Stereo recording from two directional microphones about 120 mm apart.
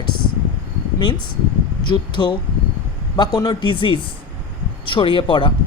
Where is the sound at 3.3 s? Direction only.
40° left (ahead or behind).